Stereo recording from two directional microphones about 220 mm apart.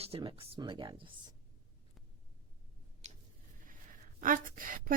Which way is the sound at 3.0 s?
30° right (ahead or behind).